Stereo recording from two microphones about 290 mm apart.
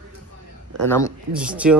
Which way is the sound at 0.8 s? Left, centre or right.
Centre.